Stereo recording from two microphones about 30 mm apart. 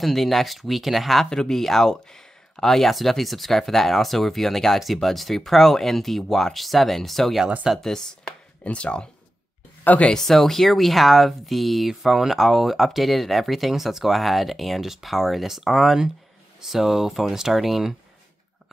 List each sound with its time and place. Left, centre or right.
0.0 s speech: centre
7.8 s speech: centre
8.6 s speech: left
10.1 s speech: centre
11.9 s speech: centre